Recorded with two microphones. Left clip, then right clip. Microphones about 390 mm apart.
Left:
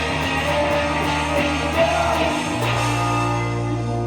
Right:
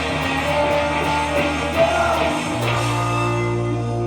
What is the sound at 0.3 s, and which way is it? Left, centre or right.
Music, right.